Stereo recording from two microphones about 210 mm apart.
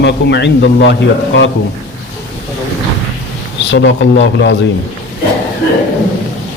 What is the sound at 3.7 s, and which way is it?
Speech, 60° left (ahead or behind).